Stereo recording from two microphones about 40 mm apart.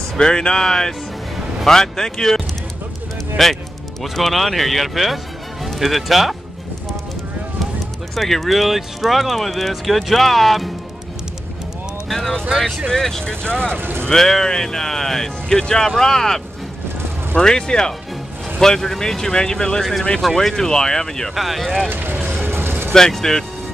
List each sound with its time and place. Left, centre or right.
0.2 s speech: centre
8.1 s speech: centre
12.1 s speech: centre
13.2 s speech: left
13.7 s speech: right
14.0 s speech: centre
17.4 s speech: centre
21.4 s speech: centre
21.8 s vehicle: right
22.9 s speech: centre